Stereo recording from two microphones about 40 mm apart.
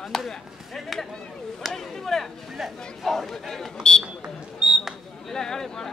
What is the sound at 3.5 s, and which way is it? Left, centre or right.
Speech, centre.